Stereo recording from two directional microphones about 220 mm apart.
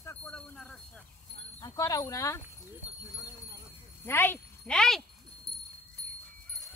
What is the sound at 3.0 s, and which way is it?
Clip-clop, 15° left (ahead or behind).